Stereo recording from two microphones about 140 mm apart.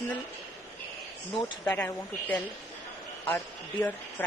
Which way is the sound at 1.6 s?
15° left (ahead or behind).